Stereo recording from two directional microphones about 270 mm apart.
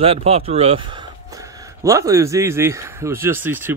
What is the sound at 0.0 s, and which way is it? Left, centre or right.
Speech, right.